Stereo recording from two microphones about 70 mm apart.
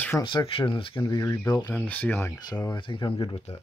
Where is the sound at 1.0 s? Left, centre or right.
Left.